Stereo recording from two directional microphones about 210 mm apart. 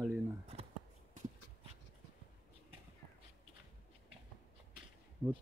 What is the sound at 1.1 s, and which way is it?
Dog, 35° right (ahead or behind).